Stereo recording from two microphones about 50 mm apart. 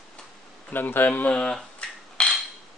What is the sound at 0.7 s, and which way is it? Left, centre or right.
Speech, left.